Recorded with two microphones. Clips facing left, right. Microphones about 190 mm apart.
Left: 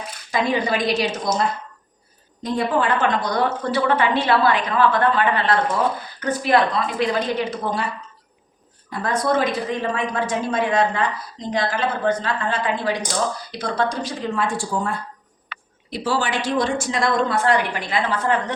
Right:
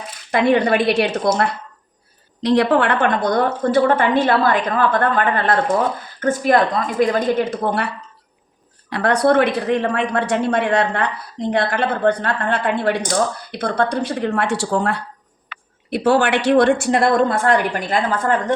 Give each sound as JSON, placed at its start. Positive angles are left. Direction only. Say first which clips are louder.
{"t": 0.3, "sound": "a woman's voice", "louder": "right 6 dB", "side_deg": -60}
{"t": 2.4, "sound": "a woman's voice", "louder": "right 6 dB", "side_deg": -80}
{"t": 15.9, "sound": "a woman's voice", "louder": "right 7 dB", "side_deg": -60}